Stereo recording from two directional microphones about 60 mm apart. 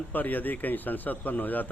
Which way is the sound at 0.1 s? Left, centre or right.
Left.